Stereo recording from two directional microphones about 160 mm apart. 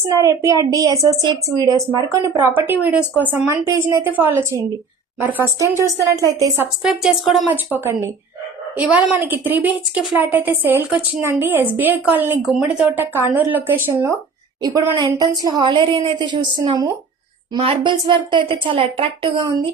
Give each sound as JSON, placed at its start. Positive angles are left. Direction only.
{"t": 0.1, "sound": "a woman's voice", "side_deg": -20}
{"t": 6.8, "sound": "a woman's voice", "side_deg": -5}
{"t": 7.5, "sound": "a woman's voice", "side_deg": -15}